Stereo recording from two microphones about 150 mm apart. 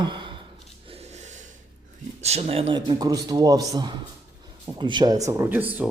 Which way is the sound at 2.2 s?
45° right (ahead or behind).